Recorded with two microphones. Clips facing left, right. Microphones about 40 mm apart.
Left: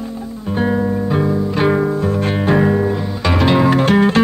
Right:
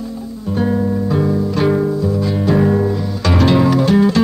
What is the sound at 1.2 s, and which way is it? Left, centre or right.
Music, centre.